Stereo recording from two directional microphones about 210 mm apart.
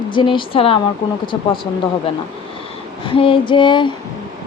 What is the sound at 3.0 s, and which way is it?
Speech, 25° left (ahead or behind).